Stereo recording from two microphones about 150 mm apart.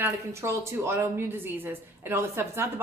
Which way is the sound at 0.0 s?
20° right (ahead or behind).